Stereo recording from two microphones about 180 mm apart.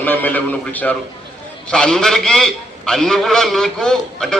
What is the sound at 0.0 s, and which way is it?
A man's voice, 10° left (ahead or behind).